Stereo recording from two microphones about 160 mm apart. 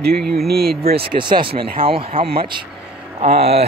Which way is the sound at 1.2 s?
30° right (ahead or behind).